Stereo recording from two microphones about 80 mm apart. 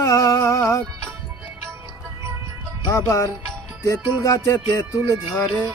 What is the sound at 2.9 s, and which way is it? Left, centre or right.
Music, left.